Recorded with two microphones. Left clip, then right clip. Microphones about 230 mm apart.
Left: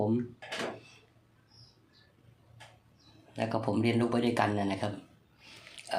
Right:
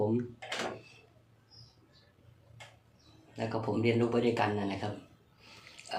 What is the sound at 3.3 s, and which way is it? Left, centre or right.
Speech, left.